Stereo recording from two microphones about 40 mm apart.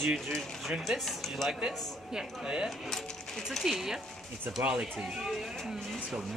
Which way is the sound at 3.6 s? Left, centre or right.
Centre.